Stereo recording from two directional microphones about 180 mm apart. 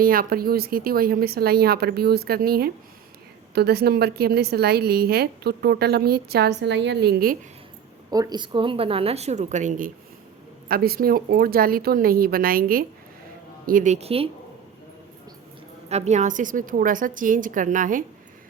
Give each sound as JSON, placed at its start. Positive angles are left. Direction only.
{"t": 0.0, "sound": "a woman's voice", "side_deg": -55}
{"t": 8.1, "sound": "a woman's voice", "side_deg": -20}
{"t": 10.7, "sound": "a woman's voice", "side_deg": -55}
{"t": 15.9, "sound": "a woman's voice", "side_deg": -40}